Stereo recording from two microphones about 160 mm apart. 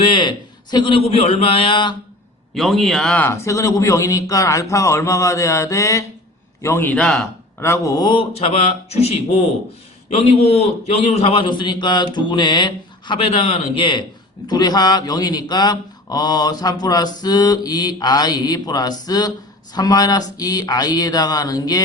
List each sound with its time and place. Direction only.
0.0 s a man's voice: 30° left (ahead or behind)
2.6 s a man's voice: centre (ahead or behind); by 6.9 s 15° left (ahead or behind)
6.9 s a man's voice: 5° left (ahead or behind)
7.6 s a man's voice: 20° left (ahead or behind)